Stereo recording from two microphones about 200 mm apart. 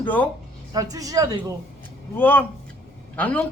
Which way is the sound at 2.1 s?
10° left (ahead or behind).